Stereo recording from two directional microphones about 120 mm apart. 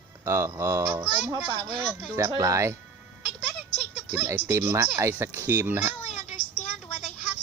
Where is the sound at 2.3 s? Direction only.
25° right (ahead or behind).